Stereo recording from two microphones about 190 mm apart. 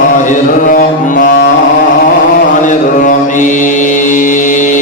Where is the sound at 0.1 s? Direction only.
45° left (ahead or behind).